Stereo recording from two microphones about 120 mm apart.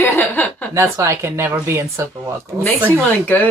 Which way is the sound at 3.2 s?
15° left (ahead or behind).